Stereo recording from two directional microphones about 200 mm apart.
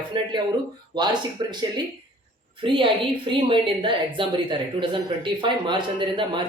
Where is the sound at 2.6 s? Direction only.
25° right (ahead or behind).